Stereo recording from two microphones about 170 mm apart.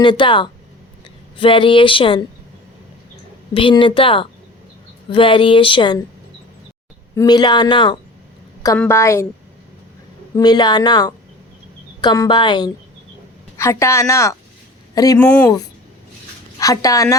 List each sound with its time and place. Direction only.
0.0 s speech: 30° left (ahead or behind)
3.5 s speech: 30° left (ahead or behind)
7.2 s speech: 25° left (ahead or behind)
8.8 s a woman's voice: 15° left (ahead or behind)
10.3 s speech: 25° left (ahead or behind)
13.6 s a woman's voice: 15° left (ahead or behind)
15.2 s a woman's voice: 10° left (ahead or behind)
16.6 s speech: 20° left (ahead or behind)